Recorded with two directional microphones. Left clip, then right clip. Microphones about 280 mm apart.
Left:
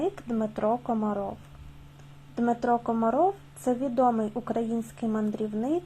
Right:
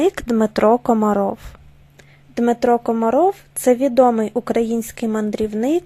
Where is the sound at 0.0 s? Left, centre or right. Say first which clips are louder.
Right 12 dB; right.